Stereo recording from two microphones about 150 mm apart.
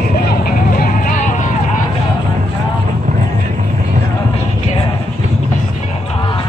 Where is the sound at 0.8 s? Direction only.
60° left (ahead or behind).